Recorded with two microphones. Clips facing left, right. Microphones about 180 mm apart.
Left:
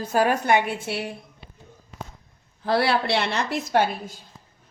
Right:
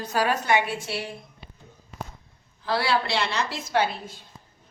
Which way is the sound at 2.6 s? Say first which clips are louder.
Left 3 dB; 55° left (ahead or behind).